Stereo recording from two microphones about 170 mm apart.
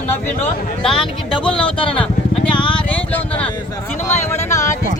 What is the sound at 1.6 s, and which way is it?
Speech, 30° left (ahead or behind).